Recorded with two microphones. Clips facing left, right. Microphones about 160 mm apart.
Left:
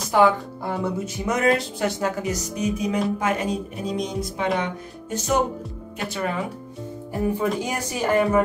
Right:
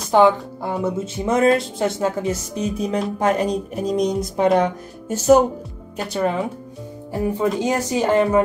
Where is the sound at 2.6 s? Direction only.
10° left (ahead or behind).